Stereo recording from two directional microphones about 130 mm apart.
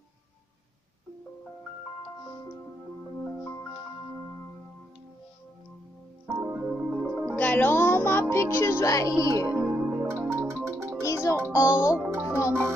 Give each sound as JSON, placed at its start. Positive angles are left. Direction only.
{"t": 6.2, "sound": "music", "side_deg": -15}
{"t": 7.2, "sound": "music", "side_deg": 10}
{"t": 9.2, "sound": "speech", "side_deg": 25}
{"t": 9.6, "sound": "music", "side_deg": -15}
{"t": 11.0, "sound": "music", "side_deg": 25}
{"t": 11.5, "sound": "speech", "side_deg": 25}
{"t": 12.1, "sound": "music", "side_deg": -15}